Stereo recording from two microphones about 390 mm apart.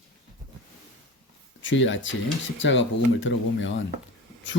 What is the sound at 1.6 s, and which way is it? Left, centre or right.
Speech, left.